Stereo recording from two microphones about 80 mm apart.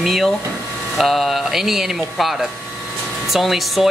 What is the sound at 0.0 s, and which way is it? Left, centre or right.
Speech, centre.